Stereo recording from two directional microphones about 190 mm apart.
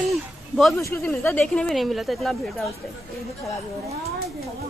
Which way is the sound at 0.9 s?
10° left (ahead or behind).